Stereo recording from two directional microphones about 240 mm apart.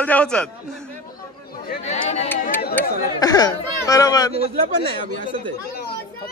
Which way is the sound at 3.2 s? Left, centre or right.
Centre.